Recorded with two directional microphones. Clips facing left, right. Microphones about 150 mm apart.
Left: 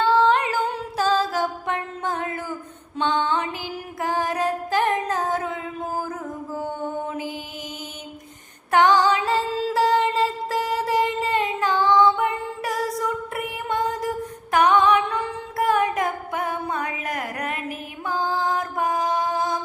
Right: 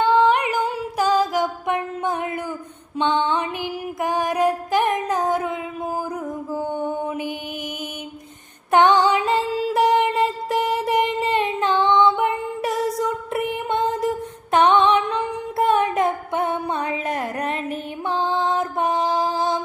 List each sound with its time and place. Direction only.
0.0 s humming: 15° right (ahead or behind)
3.0 s music: 20° right (ahead or behind)
7.1 s mantra: 20° right (ahead or behind)
8.7 s music: 20° right (ahead or behind)